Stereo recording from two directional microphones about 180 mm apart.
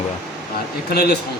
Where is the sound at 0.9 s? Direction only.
60° left (ahead or behind).